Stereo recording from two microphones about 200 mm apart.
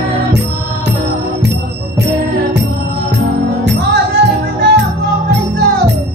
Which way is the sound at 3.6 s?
60° right (ahead or behind).